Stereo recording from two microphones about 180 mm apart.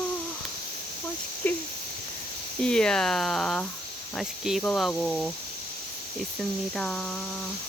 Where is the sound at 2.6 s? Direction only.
5° left (ahead or behind).